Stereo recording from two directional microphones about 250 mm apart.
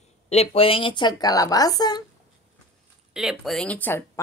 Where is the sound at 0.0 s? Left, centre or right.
Left.